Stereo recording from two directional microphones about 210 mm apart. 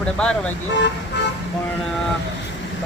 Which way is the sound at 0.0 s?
5° left (ahead or behind).